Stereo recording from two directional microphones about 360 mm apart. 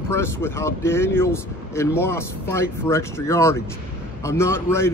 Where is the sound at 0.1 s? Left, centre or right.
Centre.